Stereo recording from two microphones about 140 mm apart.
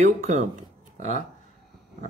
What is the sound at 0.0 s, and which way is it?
Speech, 55° right (ahead or behind).